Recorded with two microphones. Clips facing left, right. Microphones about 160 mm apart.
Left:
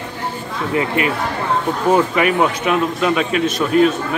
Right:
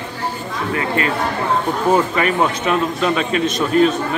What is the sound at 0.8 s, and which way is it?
A man's voice, 15° left (ahead or behind).